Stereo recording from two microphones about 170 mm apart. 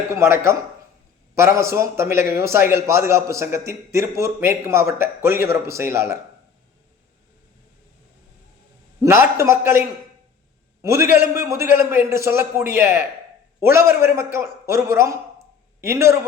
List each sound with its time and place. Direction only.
0.1 s a man's voice: 15° right (ahead or behind)
9.0 s a man's voice: 15° right (ahead or behind)
10.8 s a man's voice: 15° right (ahead or behind)